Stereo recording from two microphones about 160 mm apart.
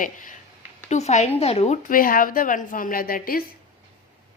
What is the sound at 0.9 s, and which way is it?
Speech, 45° left (ahead or behind).